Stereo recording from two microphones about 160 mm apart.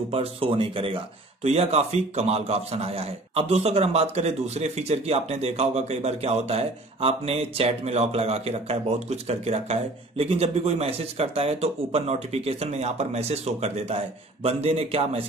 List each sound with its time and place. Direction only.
0.1 s a man's voice: 35° right (ahead or behind)